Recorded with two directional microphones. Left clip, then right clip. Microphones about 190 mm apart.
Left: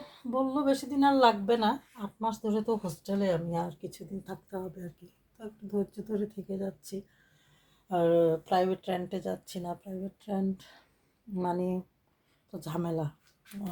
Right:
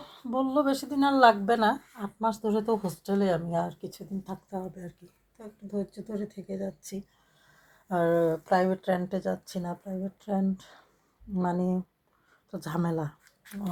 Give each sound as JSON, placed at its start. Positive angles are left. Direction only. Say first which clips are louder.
{"t": 0.0, "sound": "speech", "louder": "right 1 dB", "side_deg": -20}